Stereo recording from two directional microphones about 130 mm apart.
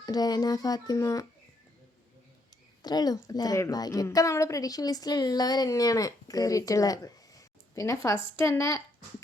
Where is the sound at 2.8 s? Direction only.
30° left (ahead or behind).